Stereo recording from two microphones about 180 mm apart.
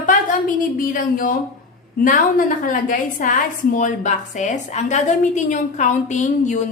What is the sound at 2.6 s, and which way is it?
A woman's voice, 45° left (ahead or behind).